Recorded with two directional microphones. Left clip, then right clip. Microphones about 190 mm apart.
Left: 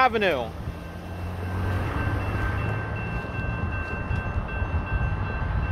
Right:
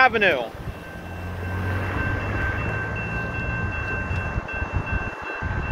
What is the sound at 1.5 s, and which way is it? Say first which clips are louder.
Vehicle: right 3 dB; 40° left (ahead or behind).